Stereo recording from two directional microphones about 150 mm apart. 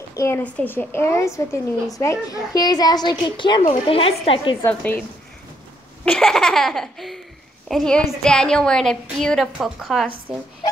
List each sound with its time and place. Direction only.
0.1 s a sound: 20° left (ahead or behind)
0.4 s a woman's voice: 10° left (ahead or behind); by 4.6 s 40° left (ahead or behind)
6.0 s laughter: 5° left (ahead or behind)